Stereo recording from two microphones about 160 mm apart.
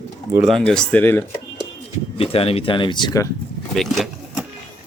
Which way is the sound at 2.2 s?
35° left (ahead or behind).